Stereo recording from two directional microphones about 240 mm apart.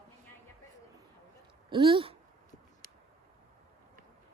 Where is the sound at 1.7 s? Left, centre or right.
Right.